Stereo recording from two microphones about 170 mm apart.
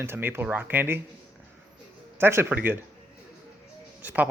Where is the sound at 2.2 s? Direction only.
15° right (ahead or behind).